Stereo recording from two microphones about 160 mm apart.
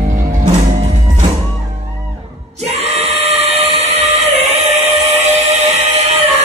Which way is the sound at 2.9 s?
40° right (ahead or behind).